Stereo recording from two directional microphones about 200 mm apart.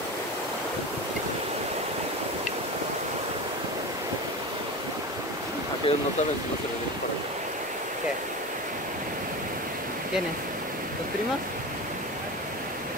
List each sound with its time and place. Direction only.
5.9 s speech: 30° left (ahead or behind)